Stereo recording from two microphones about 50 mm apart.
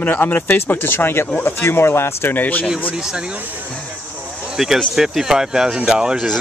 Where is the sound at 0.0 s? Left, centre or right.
Left.